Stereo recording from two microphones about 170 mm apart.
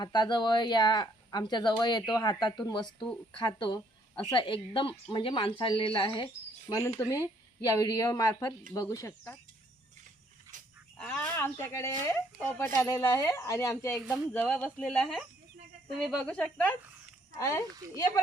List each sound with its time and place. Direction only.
0.0 s speech: 25° left (ahead or behind)
6.7 s speech: 20° left (ahead or behind)
10.5 s a sound: 20° right (ahead or behind)
10.9 s speech: 5° left (ahead or behind)
17.3 s speech: 20° left (ahead or behind)